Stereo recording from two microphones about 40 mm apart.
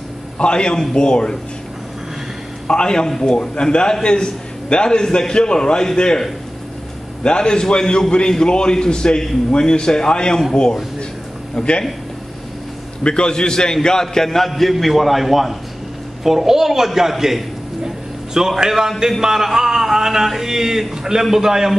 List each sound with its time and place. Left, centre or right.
0.4 s a man's voice: left
2.7 s a man's voice: left
7.2 s a man's voice: left
13.0 s a man's voice: left; by 17.4 s centre
17.8 s a sound: centre
18.6 s a man's voice: centre